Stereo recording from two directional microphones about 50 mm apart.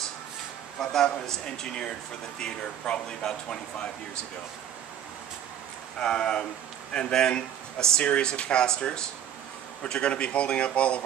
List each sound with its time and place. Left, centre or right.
0.7 s speech: centre
5.9 s speech: centre